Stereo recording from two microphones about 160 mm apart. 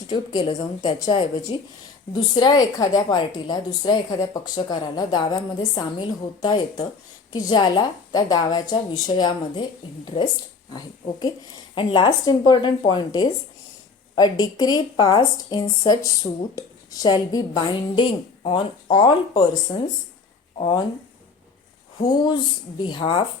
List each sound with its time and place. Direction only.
0.1 s speech: 30° left (ahead or behind)
10.7 s speech: 25° left (ahead or behind)
22.0 s speech: 25° left (ahead or behind)